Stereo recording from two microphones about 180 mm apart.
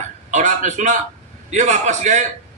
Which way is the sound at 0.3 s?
45° right (ahead or behind).